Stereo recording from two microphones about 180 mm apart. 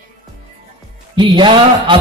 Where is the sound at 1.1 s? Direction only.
25° right (ahead or behind).